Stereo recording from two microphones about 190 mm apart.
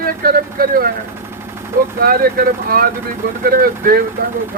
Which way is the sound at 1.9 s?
50° right (ahead or behind).